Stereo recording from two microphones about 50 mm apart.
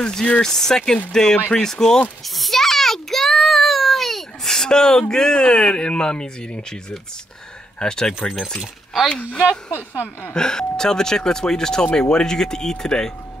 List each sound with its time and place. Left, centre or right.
0.0 s speech: centre
2.2 s a sound: centre
5.1 s speech: centre
9.1 s speech: left
9.7 s speech: left
10.3 s speech: centre